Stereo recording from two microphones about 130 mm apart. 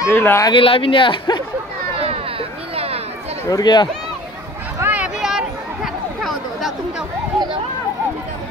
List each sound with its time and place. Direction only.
0.0 s speech: 20° left (ahead or behind)
0.5 s speech: 40° left (ahead or behind)
2.7 s chatter: 50° right (ahead or behind)
3.4 s speech: 30° left (ahead or behind)
4.7 s a sound: 15° right (ahead or behind)